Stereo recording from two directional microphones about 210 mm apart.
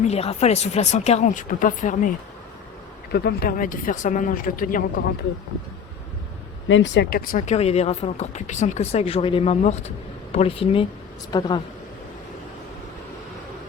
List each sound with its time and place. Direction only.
0.0 s speech: 30° left (ahead or behind)
3.1 s speech: 50° left (ahead or behind)
6.7 s speech: 65° left (ahead or behind); by 11.6 s 20° left (ahead or behind)